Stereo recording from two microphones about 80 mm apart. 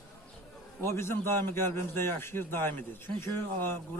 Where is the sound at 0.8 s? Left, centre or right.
Left.